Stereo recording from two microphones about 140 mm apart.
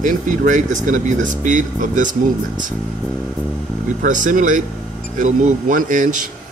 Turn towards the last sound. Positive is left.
turn(degrees=-65)  # may be behind; listen again after turning